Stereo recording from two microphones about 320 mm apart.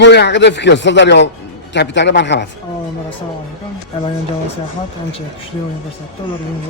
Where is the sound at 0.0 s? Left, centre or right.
Left.